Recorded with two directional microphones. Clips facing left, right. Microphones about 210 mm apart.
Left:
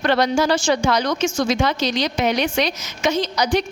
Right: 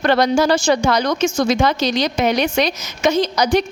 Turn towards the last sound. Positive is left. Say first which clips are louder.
# right 3 dB
turn(degrees=-40)  # may be behind; listen again after turning